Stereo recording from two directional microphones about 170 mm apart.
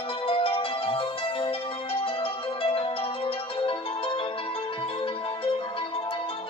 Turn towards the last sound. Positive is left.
turn(degrees=35)  # may be behind; listen again after turning